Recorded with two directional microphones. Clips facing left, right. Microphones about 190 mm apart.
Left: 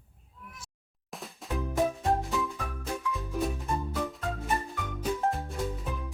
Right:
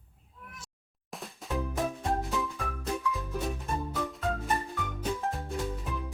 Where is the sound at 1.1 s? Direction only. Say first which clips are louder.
Right 1 dB; centre (ahead or behind).